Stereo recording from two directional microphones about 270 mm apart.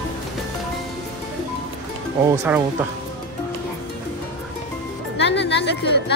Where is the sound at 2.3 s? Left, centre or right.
Centre.